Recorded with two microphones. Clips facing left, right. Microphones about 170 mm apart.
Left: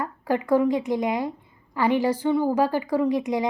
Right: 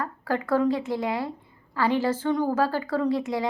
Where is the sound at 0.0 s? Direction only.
15° left (ahead or behind).